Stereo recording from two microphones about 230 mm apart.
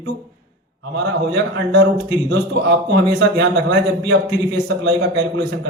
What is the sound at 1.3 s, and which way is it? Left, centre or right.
A man's voice, right.